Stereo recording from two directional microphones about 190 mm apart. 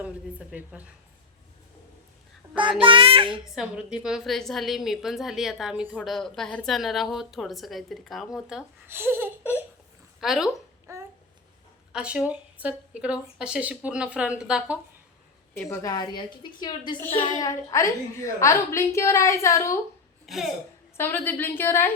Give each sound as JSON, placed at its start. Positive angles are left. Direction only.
{"t": 0.0, "sound": "speech", "side_deg": -5}
{"t": 2.6, "sound": "a child's voice", "side_deg": -25}
{"t": 3.5, "sound": "a woman's voice", "side_deg": -5}
{"t": 10.2, "sound": "a woman's voice", "side_deg": 0}
{"t": 10.9, "sound": "babbling", "side_deg": -15}
{"t": 11.9, "sound": "a woman's voice", "side_deg": -5}
{"t": 15.5, "sound": "a woman's voice", "side_deg": 15}
{"t": 17.0, "sound": "a woman's voice", "side_deg": 10}
{"t": 20.2, "sound": "a woman's voice", "side_deg": 0}
{"t": 20.9, "sound": "a woman's voice", "side_deg": 10}